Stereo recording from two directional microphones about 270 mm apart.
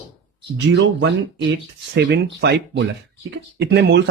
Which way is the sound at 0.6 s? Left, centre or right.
Right.